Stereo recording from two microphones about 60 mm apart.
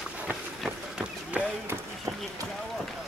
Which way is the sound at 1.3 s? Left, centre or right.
Right.